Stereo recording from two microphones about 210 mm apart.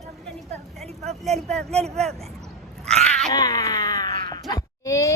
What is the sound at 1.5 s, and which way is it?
Speech, 5° left (ahead or behind).